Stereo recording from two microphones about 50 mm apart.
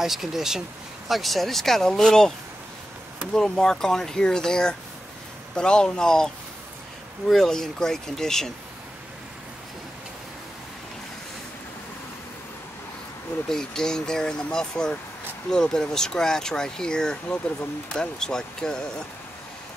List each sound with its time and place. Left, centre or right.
0.0 s speech: centre
3.3 s speech: centre
13.5 s speech: centre